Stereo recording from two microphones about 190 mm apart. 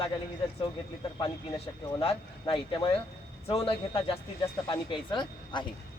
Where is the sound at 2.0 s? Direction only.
30° left (ahead or behind).